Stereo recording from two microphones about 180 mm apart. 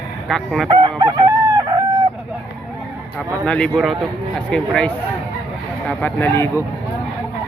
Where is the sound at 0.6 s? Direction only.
25° right (ahead or behind).